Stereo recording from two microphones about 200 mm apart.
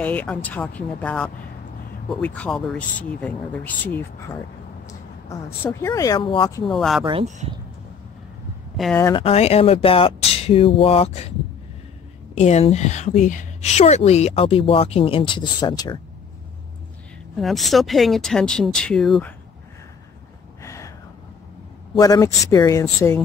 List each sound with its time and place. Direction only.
0.0 s speech: 10° left (ahead or behind)
6.7 s speech: centre (ahead or behind)
7.1 s speech: 35° right (ahead or behind)
8.8 s speech: centre (ahead or behind)
9.1 s speech: 30° left (ahead or behind)
12.4 s speech: 35° left (ahead or behind)
17.4 s speech: centre (ahead or behind)
20.6 s a sound: 15° left (ahead or behind)
21.9 s speech: 20° left (ahead or behind)